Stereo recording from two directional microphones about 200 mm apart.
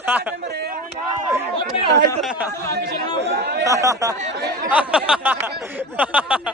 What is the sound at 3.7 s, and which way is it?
Speech, 15° right (ahead or behind).